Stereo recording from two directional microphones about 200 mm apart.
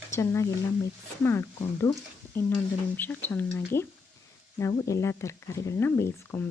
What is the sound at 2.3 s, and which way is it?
Speech, 10° left (ahead or behind).